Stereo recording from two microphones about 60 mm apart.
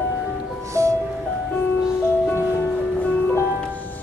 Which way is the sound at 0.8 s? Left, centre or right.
Right.